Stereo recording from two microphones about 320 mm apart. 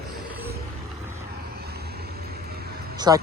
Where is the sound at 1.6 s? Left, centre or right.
Right.